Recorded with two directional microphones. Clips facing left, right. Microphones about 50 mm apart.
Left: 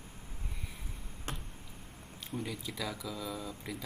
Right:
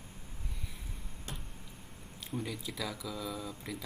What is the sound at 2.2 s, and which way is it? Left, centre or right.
Speech, centre.